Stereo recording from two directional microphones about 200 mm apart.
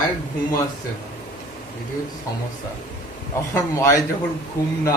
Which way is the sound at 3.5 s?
15° left (ahead or behind).